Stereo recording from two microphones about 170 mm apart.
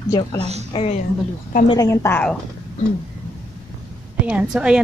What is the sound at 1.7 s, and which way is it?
Speech, 20° left (ahead or behind).